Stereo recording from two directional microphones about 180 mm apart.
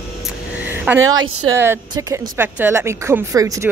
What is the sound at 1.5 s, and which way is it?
Speech, 15° right (ahead or behind).